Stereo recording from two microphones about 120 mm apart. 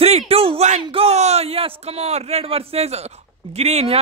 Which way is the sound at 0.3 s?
55° right (ahead or behind).